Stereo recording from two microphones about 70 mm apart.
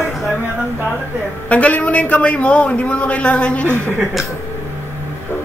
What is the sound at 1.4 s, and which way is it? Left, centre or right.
A man's voice, centre.